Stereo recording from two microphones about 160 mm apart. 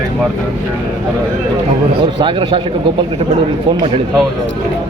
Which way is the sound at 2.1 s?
30° right (ahead or behind).